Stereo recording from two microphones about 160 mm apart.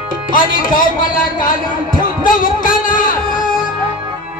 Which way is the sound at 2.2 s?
60° left (ahead or behind).